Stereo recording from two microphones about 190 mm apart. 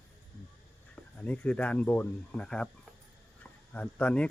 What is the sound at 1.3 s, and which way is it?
Speech, 5° left (ahead or behind).